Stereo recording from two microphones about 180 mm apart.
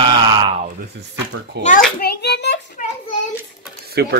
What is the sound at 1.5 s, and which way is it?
Speech, 70° right (ahead or behind).